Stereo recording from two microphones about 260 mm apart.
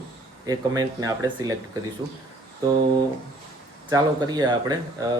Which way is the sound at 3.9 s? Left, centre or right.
Centre.